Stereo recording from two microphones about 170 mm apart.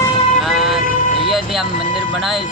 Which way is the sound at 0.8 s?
50° left (ahead or behind).